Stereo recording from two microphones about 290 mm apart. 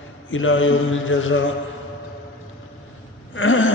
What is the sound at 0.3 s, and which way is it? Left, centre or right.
Mantra, left.